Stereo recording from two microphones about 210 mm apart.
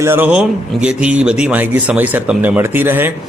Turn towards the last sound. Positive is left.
turn(degrees=-10)  # may be behind; listen again after turning